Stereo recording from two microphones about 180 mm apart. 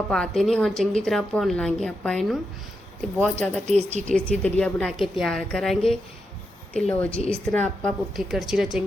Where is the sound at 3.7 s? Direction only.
40° right (ahead or behind).